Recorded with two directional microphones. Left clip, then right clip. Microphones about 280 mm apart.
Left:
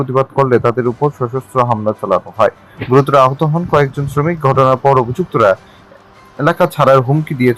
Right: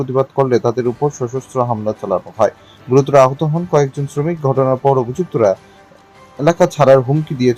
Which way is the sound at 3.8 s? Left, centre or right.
Centre.